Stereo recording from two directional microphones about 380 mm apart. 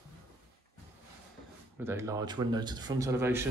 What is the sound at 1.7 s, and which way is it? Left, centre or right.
Speech, centre.